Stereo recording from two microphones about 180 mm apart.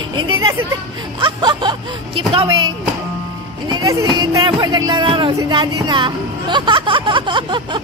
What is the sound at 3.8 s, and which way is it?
Speech, 20° right (ahead or behind).